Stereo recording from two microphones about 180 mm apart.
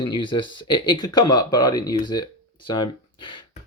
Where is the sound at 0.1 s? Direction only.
25° left (ahead or behind).